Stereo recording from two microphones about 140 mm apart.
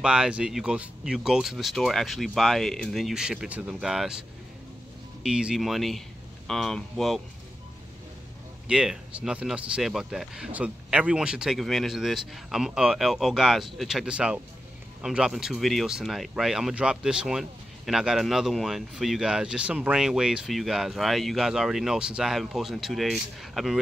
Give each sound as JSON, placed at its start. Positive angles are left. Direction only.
{"t": 0.0, "sound": "speech", "side_deg": -5}
{"t": 5.2, "sound": "speech", "side_deg": -5}
{"t": 8.6, "sound": "speech", "side_deg": -5}